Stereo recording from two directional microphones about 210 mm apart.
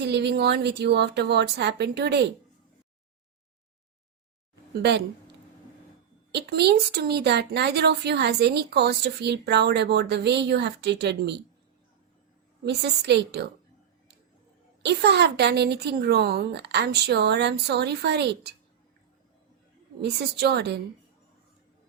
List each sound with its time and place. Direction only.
0.0 s a woman's voice: 55° right (ahead or behind)
4.7 s a woman's voice: 50° right (ahead or behind)
6.3 s a woman's voice: 50° right (ahead or behind)
12.6 s a woman's voice: 55° right (ahead or behind)
14.8 s a woman's voice: 55° right (ahead or behind)
20.0 s a woman's voice: 50° right (ahead or behind)